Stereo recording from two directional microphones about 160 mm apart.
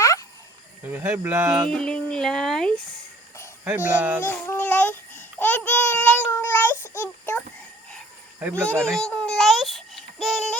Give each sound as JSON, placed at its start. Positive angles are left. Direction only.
{"t": 0.0, "sound": "a sound", "side_deg": 20}
{"t": 0.9, "sound": "speech", "side_deg": -15}
{"t": 1.7, "sound": "speech", "side_deg": 5}
{"t": 3.6, "sound": "speech", "side_deg": -10}
{"t": 4.2, "sound": "babbling", "side_deg": 10}
{"t": 7.0, "sound": "a sound", "side_deg": 15}
{"t": 8.4, "sound": "speech", "side_deg": -10}
{"t": 8.6, "sound": "a child's voice", "side_deg": 5}